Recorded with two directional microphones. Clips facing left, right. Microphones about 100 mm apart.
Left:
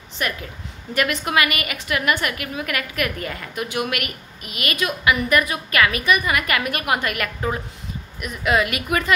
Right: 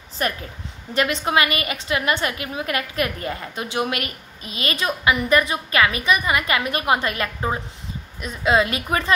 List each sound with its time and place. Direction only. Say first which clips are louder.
0.2 s a woman's voice: right 2 dB; 35° right (ahead or behind)